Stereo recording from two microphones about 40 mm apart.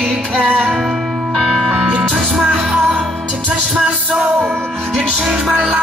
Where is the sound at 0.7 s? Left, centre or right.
Centre.